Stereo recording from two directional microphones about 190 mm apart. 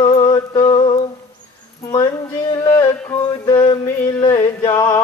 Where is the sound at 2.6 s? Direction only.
15° left (ahead or behind).